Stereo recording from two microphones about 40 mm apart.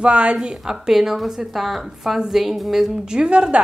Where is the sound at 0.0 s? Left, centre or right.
Right.